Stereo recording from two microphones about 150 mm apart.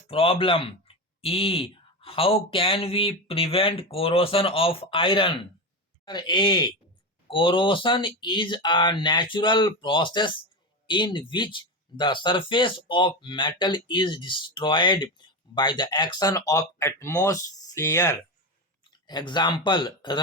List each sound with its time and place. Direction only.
0.1 s speech: 40° left (ahead or behind); by 18.2 s 20° left (ahead or behind)
18.9 s speech: 30° left (ahead or behind)